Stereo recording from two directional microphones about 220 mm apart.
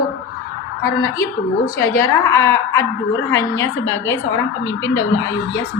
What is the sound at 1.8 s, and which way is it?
Speech, 15° left (ahead or behind).